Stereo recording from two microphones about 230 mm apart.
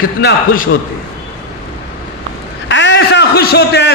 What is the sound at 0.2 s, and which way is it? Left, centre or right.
Speech, left.